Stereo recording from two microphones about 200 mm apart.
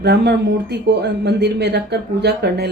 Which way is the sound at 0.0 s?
55° right (ahead or behind).